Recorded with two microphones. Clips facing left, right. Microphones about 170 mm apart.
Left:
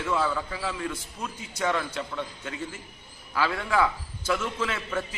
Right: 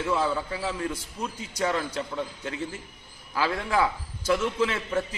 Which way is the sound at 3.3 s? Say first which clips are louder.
Even; 35° right (ahead or behind).